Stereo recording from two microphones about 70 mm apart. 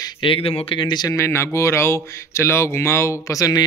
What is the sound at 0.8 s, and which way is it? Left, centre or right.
Speech, left.